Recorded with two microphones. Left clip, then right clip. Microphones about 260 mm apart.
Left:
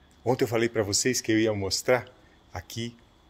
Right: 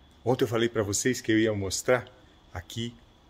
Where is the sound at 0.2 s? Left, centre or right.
Centre.